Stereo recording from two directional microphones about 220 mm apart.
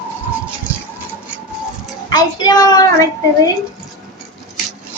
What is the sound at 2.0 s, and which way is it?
A child's voice, 15° left (ahead or behind).